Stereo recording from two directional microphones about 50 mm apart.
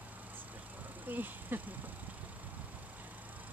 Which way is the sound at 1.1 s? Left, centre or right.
Right.